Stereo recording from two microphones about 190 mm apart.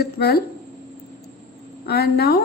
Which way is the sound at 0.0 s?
60° left (ahead or behind).